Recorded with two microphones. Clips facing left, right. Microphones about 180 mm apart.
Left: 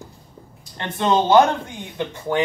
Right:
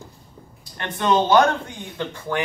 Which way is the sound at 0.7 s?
25° left (ahead or behind).